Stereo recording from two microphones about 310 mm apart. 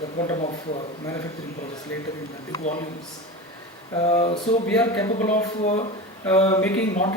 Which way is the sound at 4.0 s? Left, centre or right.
Centre.